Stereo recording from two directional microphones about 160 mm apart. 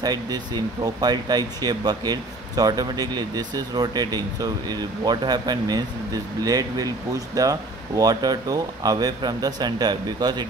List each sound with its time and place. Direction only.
0.0 s speech: 25° right (ahead or behind)